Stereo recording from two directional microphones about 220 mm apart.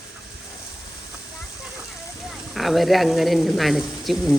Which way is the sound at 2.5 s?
Centre (ahead or behind).